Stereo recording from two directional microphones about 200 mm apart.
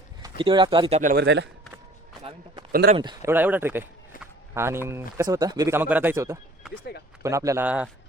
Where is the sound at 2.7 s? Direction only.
50° right (ahead or behind).